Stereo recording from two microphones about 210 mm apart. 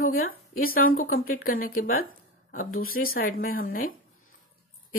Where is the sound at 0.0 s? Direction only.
45° left (ahead or behind).